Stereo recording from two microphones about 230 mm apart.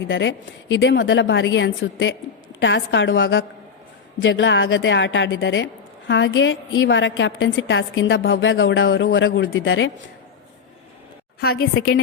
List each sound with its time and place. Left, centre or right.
0.1 s a woman's voice: left
11.3 s a woman's voice: left